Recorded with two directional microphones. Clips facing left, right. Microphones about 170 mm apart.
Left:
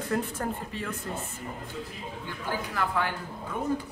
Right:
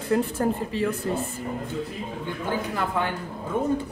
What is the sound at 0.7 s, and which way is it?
Speech, 90° right.